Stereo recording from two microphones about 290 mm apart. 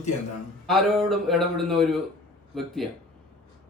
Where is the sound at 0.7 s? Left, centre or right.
Centre.